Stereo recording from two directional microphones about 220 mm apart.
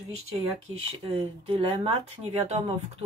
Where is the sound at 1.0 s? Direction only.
25° right (ahead or behind).